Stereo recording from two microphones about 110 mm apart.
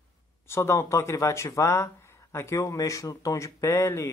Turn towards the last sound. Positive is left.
turn(degrees=25)  # may be behind; listen again after turning